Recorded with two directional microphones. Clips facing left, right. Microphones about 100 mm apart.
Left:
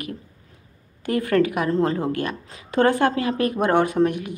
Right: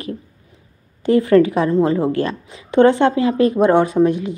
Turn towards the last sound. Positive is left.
turn(degrees=-25)  # may be behind; listen again after turning